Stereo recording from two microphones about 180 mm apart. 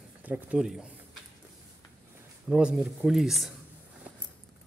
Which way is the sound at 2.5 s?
5° right (ahead or behind).